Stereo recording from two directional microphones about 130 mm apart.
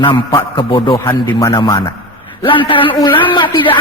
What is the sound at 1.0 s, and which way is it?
Speech, 25° left (ahead or behind).